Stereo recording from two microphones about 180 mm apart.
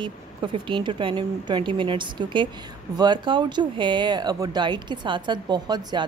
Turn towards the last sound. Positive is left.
turn(degrees=-25)  # may be behind; listen again after turning